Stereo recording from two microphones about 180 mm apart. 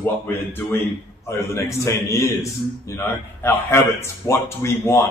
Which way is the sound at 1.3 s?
15° left (ahead or behind).